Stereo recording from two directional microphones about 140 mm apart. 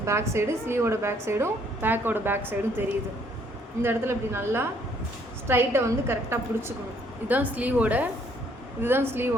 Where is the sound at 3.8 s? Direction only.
15° right (ahead or behind).